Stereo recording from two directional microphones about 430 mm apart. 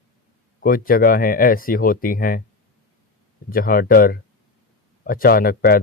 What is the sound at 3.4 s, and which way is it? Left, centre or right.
Speech, centre.